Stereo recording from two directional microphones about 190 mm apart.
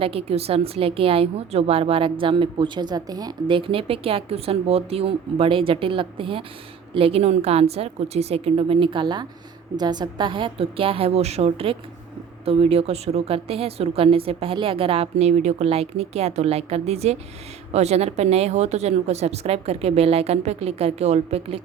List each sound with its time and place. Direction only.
0.0 s a woman's voice: 30° right (ahead or behind)